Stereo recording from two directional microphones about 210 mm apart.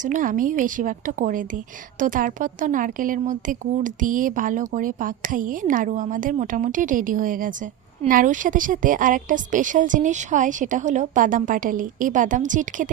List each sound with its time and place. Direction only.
0.0 s a woman's voice: 40° right (ahead or behind)